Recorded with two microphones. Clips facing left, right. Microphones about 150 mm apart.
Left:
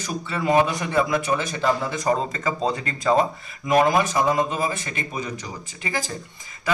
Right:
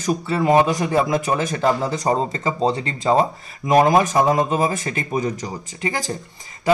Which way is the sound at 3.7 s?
40° right (ahead or behind).